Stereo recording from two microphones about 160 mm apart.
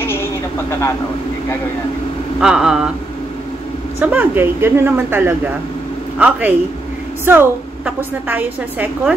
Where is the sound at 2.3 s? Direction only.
5° right (ahead or behind).